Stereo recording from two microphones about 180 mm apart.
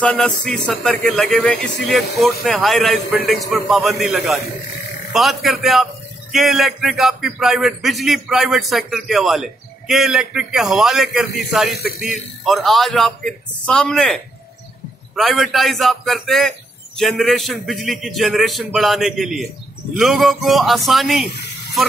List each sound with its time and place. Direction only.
0.0 s a man's voice: 5° left (ahead or behind)
11.7 s speech: 60° left (ahead or behind)
12.4 s a man's voice: centre (ahead or behind)